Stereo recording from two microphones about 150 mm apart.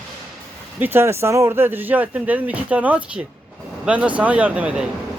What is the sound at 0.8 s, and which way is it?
Speech, 15° right (ahead or behind).